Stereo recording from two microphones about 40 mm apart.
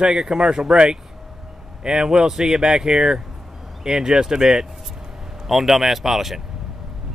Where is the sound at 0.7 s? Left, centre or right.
Right.